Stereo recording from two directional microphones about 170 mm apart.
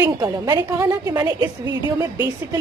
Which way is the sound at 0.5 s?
15° right (ahead or behind).